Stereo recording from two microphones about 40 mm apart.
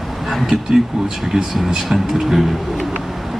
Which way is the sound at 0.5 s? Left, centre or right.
Right.